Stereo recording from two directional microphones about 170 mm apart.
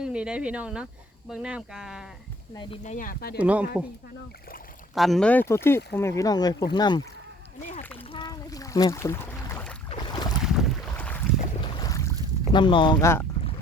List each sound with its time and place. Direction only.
0.0 s speech: 5° right (ahead or behind)
2.8 s speech: 50° left (ahead or behind)
3.3 s speech: 10° right (ahead or behind)
4.9 s speech: centre (ahead or behind); by 7.0 s 25° left (ahead or behind)
8.1 s boat: 25° left (ahead or behind)
9.9 s boat: 25° left (ahead or behind)
10.4 s boat: centre (ahead or behind)
11.3 s boat: 25° left (ahead or behind)
12.5 s speech: 30° left (ahead or behind)